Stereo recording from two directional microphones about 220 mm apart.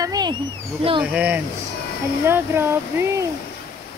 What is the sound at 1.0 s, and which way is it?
Speech, 5° right (ahead or behind).